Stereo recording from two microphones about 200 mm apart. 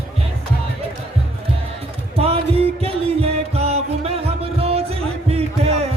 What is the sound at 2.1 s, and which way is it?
Music, 30° right (ahead or behind).